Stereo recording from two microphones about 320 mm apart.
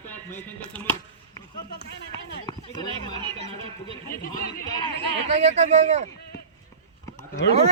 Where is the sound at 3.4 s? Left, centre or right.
Left.